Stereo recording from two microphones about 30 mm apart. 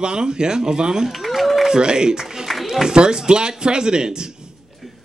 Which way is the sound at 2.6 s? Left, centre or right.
Centre.